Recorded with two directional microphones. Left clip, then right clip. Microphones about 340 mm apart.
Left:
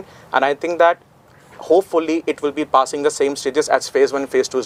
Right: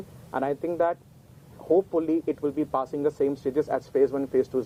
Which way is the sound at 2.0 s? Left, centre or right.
Centre.